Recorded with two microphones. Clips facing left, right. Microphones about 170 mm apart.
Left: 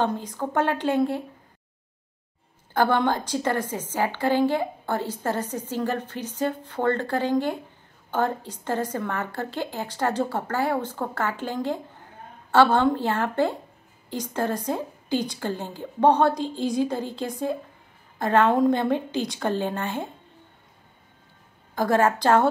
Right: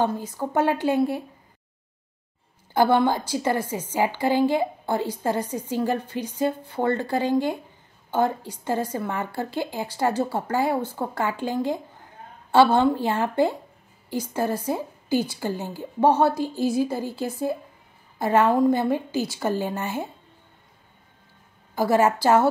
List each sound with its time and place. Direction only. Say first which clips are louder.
0.0 s a woman's voice: right 1 dB; 10° right (ahead or behind)
2.7 s a woman's voice: right 2 dB; 10° right (ahead or behind)
21.7 s a woman's voice: right 1 dB; 10° right (ahead or behind)